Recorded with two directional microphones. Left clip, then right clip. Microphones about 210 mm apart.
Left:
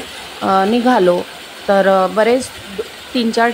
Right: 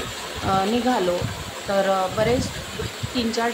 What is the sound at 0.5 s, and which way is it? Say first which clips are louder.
A woman's voice: left 8 dB; 40° left (ahead or behind).